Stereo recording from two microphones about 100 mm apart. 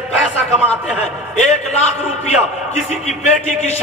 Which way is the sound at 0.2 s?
10° left (ahead or behind).